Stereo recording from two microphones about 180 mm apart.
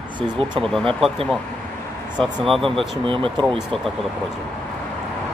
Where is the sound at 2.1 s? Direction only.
25° right (ahead or behind).